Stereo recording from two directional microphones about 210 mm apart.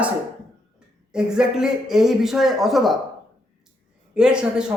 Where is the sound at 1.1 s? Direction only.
5° right (ahead or behind).